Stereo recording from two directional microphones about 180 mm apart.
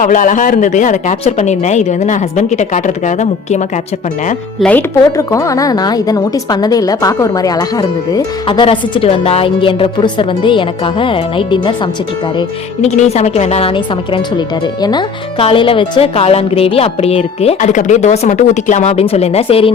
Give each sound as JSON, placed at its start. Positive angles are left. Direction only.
{"t": 0.0, "sound": "speech", "side_deg": 45}
{"t": 4.6, "sound": "a woman's voice", "side_deg": 10}
{"t": 12.8, "sound": "a woman's voice", "side_deg": 40}